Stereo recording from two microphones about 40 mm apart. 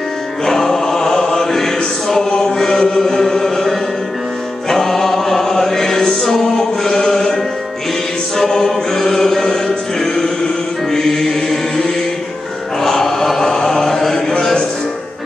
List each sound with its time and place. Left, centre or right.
0.5 s chant: centre
4.6 s music: centre
8.4 s music: centre
12.8 s chant: centre
14.4 s music: centre